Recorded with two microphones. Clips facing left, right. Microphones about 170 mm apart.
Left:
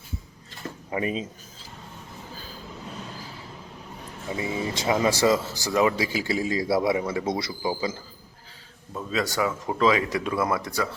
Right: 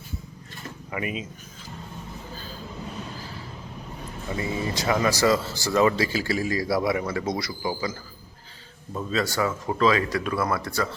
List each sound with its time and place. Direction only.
0.9 s speech: 30° left (ahead or behind)
4.4 s speech: 20° left (ahead or behind)
9.0 s speech: 15° left (ahead or behind)